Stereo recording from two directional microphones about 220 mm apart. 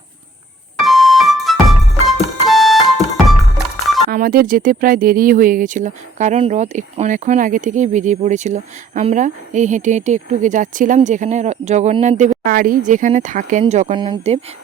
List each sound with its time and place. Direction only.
0.8 s music: centre (ahead or behind)
4.1 s speech: 40° right (ahead or behind); by 14.3 s 20° right (ahead or behind)